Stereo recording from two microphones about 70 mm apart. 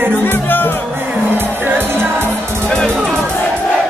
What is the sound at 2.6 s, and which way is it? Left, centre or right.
Music, centre.